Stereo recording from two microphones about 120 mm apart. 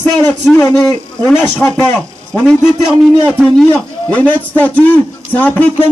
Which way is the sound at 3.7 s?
10° left (ahead or behind).